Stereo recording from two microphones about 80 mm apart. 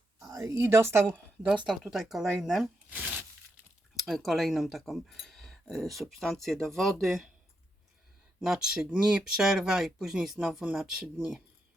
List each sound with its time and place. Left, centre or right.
0.3 s a woman's voice: right
1.6 s speech: centre
3.9 s speech: centre
8.4 s speech: centre